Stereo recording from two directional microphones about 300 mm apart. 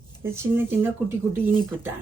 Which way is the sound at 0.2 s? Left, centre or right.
Centre.